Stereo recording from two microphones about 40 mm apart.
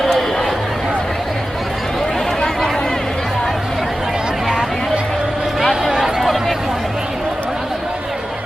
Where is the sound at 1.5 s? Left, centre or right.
Centre.